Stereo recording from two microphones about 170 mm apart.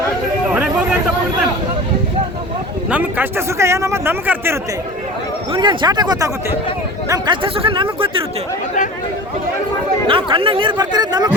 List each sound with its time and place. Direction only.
0.5 s a sound: 10° right (ahead or behind)
2.9 s a man's voice: 10° right (ahead or behind)
5.5 s speech: 25° right (ahead or behind)
10.1 s speech: 30° right (ahead or behind)